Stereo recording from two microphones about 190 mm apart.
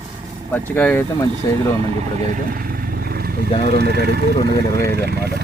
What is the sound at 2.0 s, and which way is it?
Vehicle, 45° right (ahead or behind).